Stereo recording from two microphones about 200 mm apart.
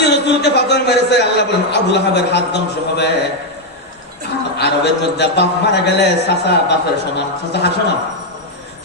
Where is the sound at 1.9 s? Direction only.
60° left (ahead or behind).